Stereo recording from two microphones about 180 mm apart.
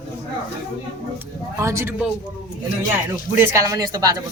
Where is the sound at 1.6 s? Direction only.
15° right (ahead or behind).